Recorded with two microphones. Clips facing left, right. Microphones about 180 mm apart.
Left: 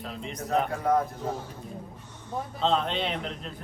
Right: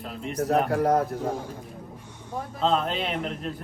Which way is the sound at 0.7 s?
70° right (ahead or behind).